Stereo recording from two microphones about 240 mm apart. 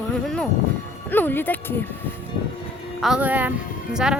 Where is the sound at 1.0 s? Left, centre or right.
Centre.